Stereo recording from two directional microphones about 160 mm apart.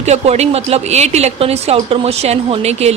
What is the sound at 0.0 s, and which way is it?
A woman's voice, 40° right (ahead or behind).